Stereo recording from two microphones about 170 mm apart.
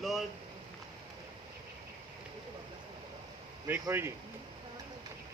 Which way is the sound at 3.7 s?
15° right (ahead or behind).